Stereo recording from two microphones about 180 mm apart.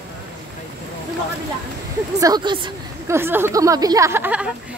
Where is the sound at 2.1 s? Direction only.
20° right (ahead or behind).